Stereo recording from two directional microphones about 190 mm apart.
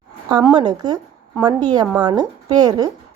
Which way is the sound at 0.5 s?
20° right (ahead or behind).